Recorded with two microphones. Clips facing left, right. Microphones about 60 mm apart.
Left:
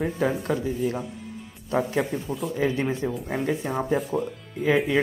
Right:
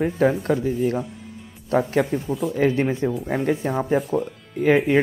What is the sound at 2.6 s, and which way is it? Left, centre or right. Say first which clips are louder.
Speech: right 5 dB; right.